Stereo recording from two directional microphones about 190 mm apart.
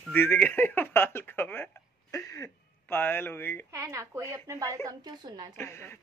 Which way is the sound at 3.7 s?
15° right (ahead or behind).